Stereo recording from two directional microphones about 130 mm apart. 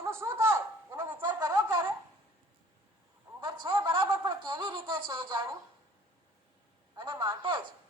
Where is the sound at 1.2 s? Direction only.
35° right (ahead or behind).